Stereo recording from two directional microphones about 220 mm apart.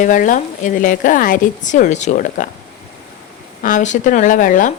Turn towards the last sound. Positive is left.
turn(degrees=35)  # may be behind; listen again after turning